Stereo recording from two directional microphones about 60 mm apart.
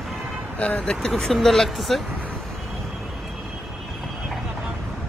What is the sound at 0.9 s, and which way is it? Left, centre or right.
Speech, centre.